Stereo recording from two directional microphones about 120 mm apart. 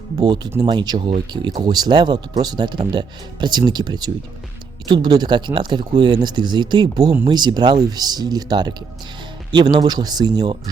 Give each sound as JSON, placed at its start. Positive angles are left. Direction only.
{"t": 0.2, "sound": "speech", "side_deg": -35}